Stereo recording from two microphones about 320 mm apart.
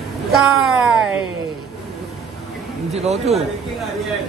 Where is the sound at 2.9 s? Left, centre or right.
Right.